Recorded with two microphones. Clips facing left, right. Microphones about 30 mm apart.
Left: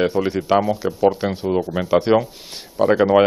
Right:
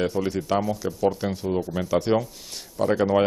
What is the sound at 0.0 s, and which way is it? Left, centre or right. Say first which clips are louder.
Speech: left 6 dB; left.